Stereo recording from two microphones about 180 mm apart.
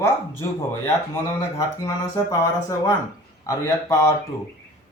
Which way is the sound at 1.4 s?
15° left (ahead or behind).